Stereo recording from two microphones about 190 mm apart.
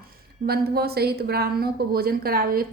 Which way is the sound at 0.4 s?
55° right (ahead or behind).